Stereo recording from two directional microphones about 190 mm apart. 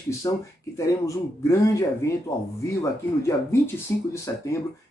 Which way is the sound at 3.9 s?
15° left (ahead or behind).